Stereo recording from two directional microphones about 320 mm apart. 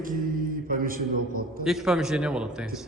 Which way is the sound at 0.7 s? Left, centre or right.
Right.